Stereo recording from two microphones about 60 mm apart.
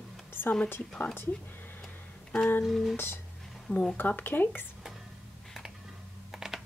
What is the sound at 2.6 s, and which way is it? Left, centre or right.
Speech, centre.